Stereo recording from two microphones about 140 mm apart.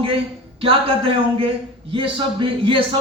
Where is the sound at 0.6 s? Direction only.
40° right (ahead or behind).